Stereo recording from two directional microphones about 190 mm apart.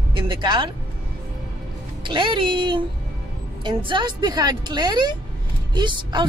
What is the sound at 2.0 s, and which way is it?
Speech, 25° right (ahead or behind).